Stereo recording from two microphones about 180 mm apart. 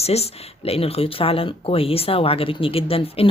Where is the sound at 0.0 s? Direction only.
35° left (ahead or behind).